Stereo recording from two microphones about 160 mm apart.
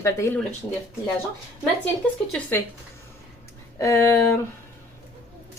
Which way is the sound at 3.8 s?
20° left (ahead or behind).